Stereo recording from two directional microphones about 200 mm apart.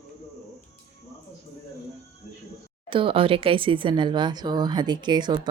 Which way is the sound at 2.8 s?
25° right (ahead or behind).